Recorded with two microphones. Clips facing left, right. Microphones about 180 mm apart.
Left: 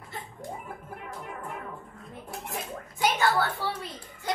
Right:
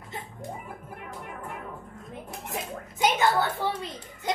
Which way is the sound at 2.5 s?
20° right (ahead or behind).